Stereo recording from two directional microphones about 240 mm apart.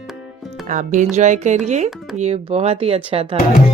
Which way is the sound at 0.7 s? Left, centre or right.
Right.